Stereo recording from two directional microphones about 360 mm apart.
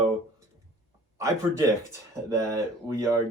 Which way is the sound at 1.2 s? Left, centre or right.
Centre.